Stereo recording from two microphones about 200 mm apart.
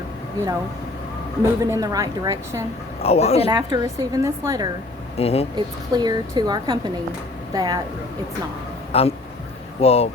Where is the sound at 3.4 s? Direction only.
20° right (ahead or behind).